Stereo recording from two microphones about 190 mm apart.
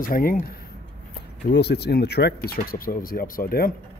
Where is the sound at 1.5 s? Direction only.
60° left (ahead or behind).